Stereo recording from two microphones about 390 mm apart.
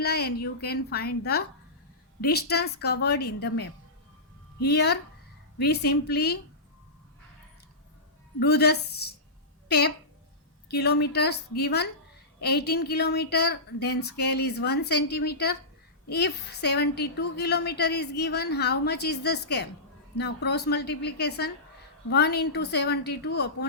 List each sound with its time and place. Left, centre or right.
0.0 s a woman's voice: left
8.4 s a woman's voice: left